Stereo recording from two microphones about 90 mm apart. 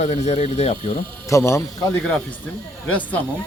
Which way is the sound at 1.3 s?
35° left (ahead or behind).